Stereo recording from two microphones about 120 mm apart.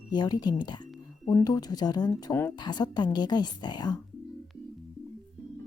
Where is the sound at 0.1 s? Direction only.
35° left (ahead or behind).